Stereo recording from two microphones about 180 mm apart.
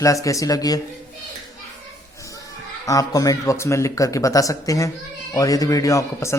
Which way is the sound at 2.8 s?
20° left (ahead or behind).